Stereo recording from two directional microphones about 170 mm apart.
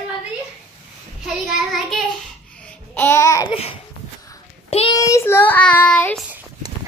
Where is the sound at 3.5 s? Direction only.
35° left (ahead or behind).